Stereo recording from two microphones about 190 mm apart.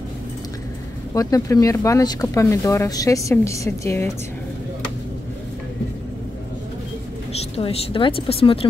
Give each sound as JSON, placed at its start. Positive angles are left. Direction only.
{"t": 1.1, "sound": "speech", "side_deg": 20}
{"t": 7.3, "sound": "speech", "side_deg": 30}